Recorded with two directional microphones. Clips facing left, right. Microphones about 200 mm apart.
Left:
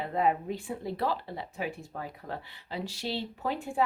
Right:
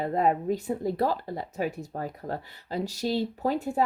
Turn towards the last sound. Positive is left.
turn(degrees=-40)  # may be behind; listen again after turning